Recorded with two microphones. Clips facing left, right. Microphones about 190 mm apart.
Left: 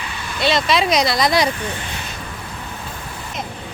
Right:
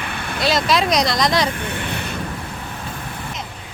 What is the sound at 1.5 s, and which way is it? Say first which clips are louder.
Speech: right 2 dB; 60° right (ahead or behind).